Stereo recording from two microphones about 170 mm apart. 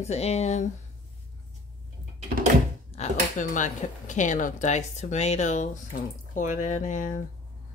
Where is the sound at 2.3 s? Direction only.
60° right (ahead or behind).